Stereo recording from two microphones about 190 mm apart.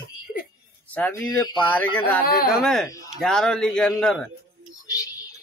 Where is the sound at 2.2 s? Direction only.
50° left (ahead or behind).